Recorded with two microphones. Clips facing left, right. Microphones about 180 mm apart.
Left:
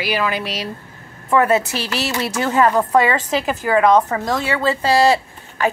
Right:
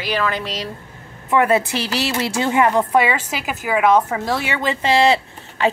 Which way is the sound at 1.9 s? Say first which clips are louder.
Right 1 dB; 25° right (ahead or behind).